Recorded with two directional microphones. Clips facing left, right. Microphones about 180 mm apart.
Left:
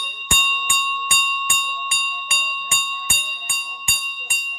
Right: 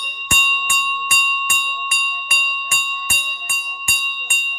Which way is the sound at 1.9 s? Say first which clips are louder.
Right 1 dB; 25° left (ahead or behind).